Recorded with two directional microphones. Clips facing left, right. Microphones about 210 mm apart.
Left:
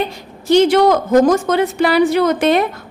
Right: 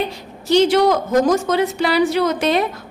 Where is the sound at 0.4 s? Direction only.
55° left (ahead or behind).